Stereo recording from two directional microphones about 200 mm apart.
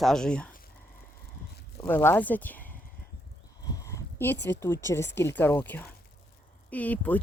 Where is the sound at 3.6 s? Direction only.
20° left (ahead or behind).